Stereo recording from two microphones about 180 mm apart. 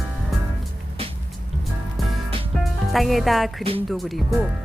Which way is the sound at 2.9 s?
Centre (ahead or behind).